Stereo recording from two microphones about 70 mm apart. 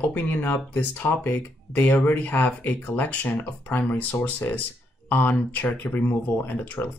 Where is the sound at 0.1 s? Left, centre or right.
Left.